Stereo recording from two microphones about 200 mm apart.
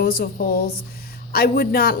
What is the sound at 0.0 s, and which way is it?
Speech, 50° left (ahead or behind).